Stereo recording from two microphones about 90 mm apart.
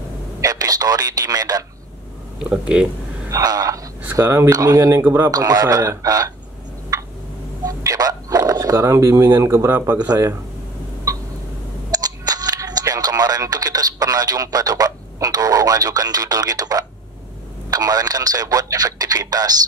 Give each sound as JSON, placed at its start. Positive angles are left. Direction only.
{"t": 0.4, "sound": "speech", "side_deg": -45}
{"t": 2.5, "sound": "speech", "side_deg": -10}
{"t": 3.3, "sound": "speech", "side_deg": -40}
{"t": 5.0, "sound": "speech", "side_deg": -25}
{"t": 5.3, "sound": "speech", "side_deg": -40}
{"t": 7.6, "sound": "dog", "side_deg": -45}
{"t": 9.9, "sound": "speech", "side_deg": -50}
{"t": 11.1, "sound": "a sound", "side_deg": -40}
{"t": 11.9, "sound": "camera", "side_deg": -45}
{"t": 17.7, "sound": "speech", "side_deg": -45}